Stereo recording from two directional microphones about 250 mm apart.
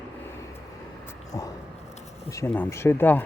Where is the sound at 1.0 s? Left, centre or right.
Centre.